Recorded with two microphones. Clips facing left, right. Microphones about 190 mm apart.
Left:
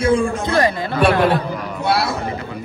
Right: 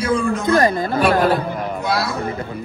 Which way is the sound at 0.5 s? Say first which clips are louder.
Right 3 dB; 50° right (ahead or behind).